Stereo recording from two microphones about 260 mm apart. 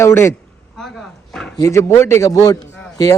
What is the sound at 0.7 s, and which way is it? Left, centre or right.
Dog, centre.